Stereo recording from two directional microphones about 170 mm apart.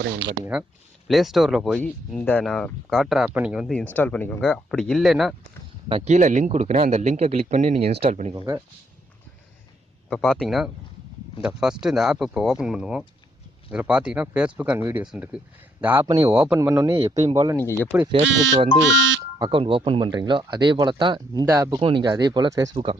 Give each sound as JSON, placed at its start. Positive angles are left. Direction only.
{"t": 0.0, "sound": "speech", "side_deg": -90}
{"t": 1.0, "sound": "speech", "side_deg": 0}
{"t": 3.9, "sound": "speech", "side_deg": 10}
{"t": 5.9, "sound": "a man's voice", "side_deg": -45}
{"t": 10.1, "sound": "speech", "side_deg": 5}
{"t": 17.6, "sound": "speech", "side_deg": 15}
{"t": 18.3, "sound": "speech", "side_deg": -90}
{"t": 19.4, "sound": "speech", "side_deg": -30}
{"t": 21.8, "sound": "speech", "side_deg": -30}